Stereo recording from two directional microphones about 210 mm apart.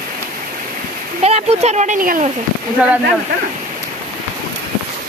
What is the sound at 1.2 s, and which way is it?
Speech, 30° right (ahead or behind).